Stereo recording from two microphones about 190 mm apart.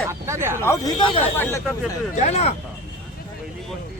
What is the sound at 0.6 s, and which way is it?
Speech, 20° left (ahead or behind).